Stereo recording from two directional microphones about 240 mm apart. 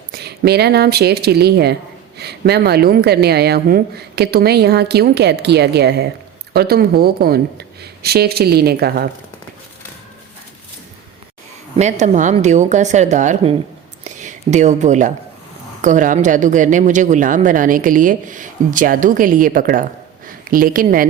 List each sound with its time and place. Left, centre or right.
0.1 s a woman's voice: right
11.8 s speech: right
14.0 s a sound: right
15.8 s speech: right